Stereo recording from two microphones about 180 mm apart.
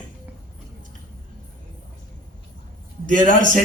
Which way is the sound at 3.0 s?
45° right (ahead or behind).